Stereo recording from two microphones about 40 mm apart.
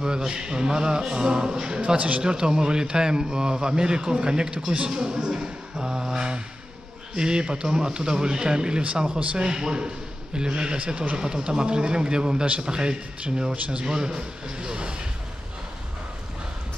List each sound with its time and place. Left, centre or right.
0.0 s a man's voice: centre
2.0 s speech: right
2.2 s a man's voice: centre